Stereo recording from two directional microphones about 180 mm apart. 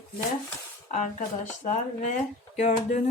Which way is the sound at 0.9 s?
45° left (ahead or behind).